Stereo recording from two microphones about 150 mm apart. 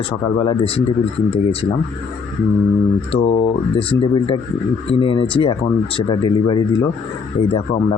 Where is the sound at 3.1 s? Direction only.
40° left (ahead or behind).